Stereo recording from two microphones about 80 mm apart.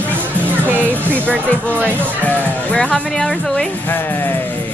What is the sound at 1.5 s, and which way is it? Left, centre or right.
Speech, centre.